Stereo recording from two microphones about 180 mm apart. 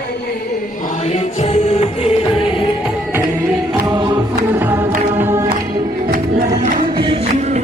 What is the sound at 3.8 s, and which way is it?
Choir, 20° right (ahead or behind).